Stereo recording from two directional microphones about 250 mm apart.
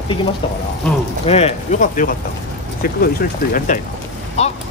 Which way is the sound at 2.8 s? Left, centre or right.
Left.